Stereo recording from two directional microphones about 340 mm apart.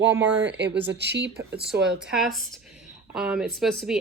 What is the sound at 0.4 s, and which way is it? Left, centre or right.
Speech, right.